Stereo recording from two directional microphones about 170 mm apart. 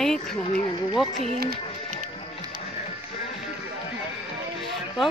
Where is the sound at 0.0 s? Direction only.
5° left (ahead or behind).